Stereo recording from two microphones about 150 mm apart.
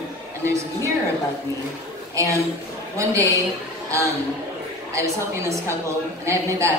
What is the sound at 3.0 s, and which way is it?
Speech, 20° right (ahead or behind).